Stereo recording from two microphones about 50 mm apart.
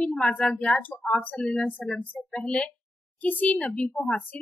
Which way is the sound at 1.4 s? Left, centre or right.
Centre.